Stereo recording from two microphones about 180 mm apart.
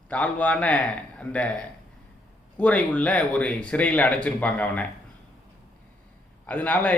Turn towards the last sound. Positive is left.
turn(degrees=10)  # may be behind; listen again after turning